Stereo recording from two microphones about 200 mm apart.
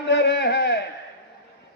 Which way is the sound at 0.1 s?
60° left (ahead or behind).